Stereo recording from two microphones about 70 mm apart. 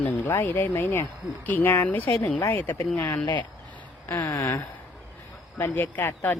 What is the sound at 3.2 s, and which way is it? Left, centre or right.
Speech, left.